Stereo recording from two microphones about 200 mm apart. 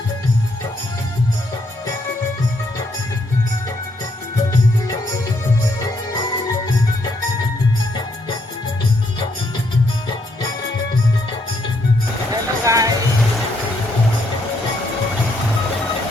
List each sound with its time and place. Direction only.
6.1 s music: 20° left (ahead or behind)
12.3 s music: 15° right (ahead or behind)